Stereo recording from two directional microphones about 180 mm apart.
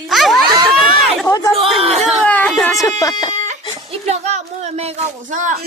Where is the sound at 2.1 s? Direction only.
10° left (ahead or behind).